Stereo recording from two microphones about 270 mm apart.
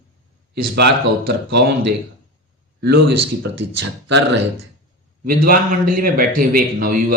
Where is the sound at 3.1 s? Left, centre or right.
Right.